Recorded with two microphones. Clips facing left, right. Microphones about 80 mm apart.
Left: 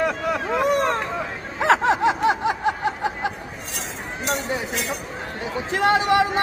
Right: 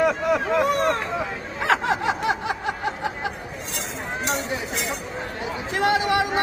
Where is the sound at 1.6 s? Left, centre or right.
Left.